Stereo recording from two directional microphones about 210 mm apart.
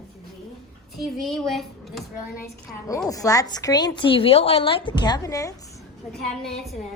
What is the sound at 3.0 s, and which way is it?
A woman's voice, 15° left (ahead or behind).